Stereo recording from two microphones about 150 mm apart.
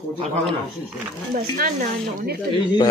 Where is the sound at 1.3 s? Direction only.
55° right (ahead or behind).